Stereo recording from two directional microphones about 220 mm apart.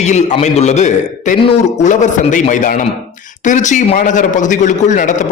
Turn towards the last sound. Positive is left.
turn(degrees=35)  # may be behind; listen again after turning